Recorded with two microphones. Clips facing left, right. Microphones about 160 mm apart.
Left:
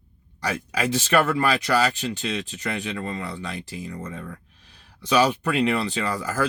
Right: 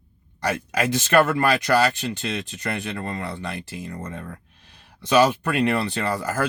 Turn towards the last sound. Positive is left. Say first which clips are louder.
# right 1 dB
turn(degrees=-50)  # may be behind; listen again after turning